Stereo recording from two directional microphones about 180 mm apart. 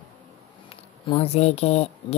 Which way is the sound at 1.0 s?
35° left (ahead or behind).